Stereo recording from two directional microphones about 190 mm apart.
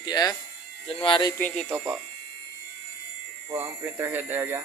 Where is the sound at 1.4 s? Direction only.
10° left (ahead or behind).